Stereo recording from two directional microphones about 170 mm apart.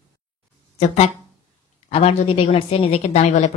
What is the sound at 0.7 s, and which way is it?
Speech, 40° left (ahead or behind).